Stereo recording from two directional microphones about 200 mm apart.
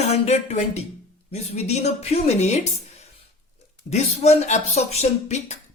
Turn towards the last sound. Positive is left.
turn(degrees=35)  # may be behind; listen again after turning